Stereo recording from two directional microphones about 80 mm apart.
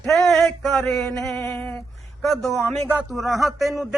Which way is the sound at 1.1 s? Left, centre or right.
Centre.